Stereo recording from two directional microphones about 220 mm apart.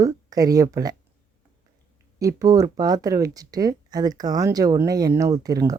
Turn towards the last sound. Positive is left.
turn(degrees=-15)  # may be behind; listen again after turning